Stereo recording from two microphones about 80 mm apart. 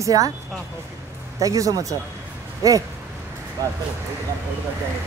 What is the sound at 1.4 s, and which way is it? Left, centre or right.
A woman's voice, right.